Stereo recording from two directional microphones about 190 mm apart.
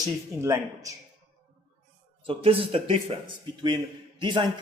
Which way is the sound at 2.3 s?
30° right (ahead or behind).